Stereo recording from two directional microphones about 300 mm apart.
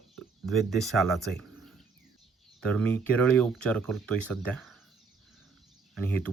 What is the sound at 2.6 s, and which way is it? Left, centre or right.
Speech, centre.